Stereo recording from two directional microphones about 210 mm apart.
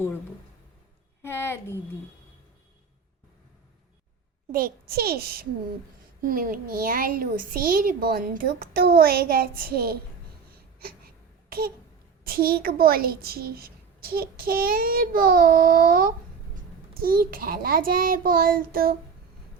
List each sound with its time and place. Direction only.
1.2 s a woman's voice: 10° left (ahead or behind)
4.5 s a woman's voice: 45° right (ahead or behind)
10.8 s a sound: 45° right (ahead or behind)
12.2 s a woman's voice: 45° right (ahead or behind)